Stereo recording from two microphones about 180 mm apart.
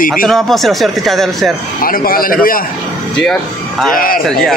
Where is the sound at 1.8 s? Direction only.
50° left (ahead or behind).